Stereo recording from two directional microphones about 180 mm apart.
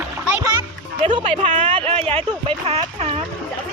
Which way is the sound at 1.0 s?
35° right (ahead or behind).